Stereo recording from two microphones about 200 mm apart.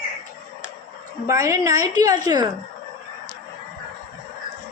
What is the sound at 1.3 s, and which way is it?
A woman's voice, 15° right (ahead or behind).